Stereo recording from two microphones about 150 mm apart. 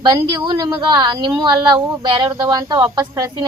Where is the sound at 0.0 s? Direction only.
30° right (ahead or behind).